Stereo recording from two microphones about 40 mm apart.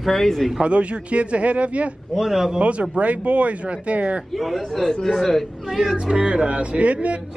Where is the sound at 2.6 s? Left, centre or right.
Right.